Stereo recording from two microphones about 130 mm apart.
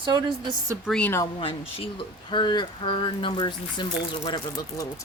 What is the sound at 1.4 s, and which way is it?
Speech, 45° left (ahead or behind).